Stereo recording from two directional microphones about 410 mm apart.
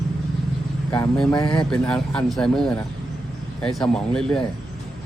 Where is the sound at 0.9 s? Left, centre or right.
Centre.